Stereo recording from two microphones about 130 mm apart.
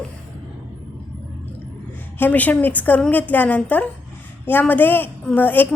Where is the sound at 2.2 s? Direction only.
15° left (ahead or behind).